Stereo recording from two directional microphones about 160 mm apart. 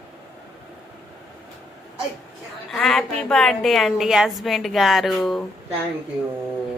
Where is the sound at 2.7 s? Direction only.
5° left (ahead or behind).